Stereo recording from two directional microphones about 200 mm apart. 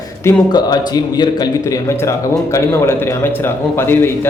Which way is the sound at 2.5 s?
15° left (ahead or behind).